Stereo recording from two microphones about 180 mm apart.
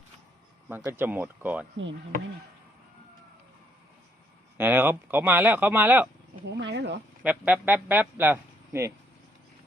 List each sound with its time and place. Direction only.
0.7 s speech: 10° right (ahead or behind)
4.5 s speech: 10° right (ahead or behind)
6.6 s speech: 70° right (ahead or behind)
7.2 s speech: 5° right (ahead or behind)